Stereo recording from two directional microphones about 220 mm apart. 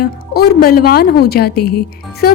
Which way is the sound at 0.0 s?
40° left (ahead or behind).